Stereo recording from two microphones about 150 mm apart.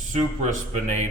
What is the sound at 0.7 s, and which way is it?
Speech, 50° right (ahead or behind).